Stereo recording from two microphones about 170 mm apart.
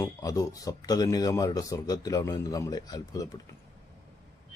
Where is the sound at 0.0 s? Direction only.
20° left (ahead or behind).